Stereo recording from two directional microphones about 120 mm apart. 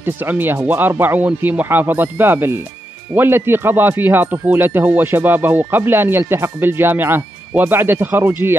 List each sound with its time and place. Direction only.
0.0 s speech: 15° right (ahead or behind)